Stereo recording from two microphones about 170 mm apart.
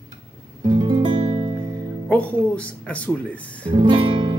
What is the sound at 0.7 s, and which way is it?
Music, 30° right (ahead or behind).